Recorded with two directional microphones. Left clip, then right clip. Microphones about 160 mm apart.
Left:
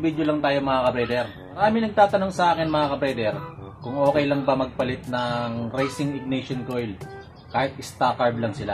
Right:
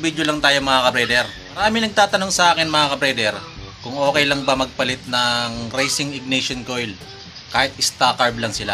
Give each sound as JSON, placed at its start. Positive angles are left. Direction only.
{"t": 0.0, "sound": "a man's voice", "side_deg": -20}